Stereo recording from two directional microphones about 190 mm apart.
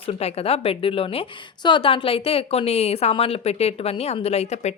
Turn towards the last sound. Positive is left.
turn(degrees=35)  # may be behind; listen again after turning